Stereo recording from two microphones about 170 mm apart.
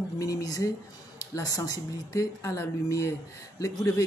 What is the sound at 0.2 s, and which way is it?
Speech, 20° left (ahead or behind).